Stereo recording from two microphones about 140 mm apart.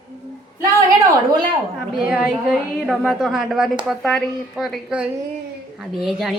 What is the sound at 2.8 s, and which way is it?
A woman's voice, centre (ahead or behind).